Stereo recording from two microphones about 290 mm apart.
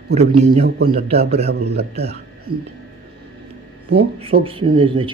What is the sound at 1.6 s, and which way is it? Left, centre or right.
Speech, right.